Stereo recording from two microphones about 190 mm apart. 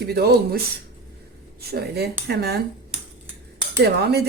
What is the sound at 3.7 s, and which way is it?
Speech, 60° right (ahead or behind).